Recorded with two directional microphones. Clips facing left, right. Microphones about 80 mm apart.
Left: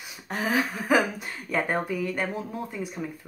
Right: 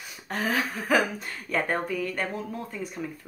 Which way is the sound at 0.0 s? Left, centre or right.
Centre.